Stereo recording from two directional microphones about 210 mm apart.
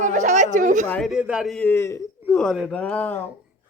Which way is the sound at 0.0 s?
35° right (ahead or behind).